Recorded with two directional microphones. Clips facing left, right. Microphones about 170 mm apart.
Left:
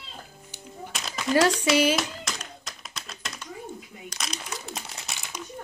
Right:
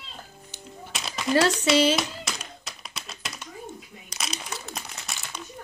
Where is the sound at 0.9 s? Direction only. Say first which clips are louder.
Right 1 dB; centre (ahead or behind).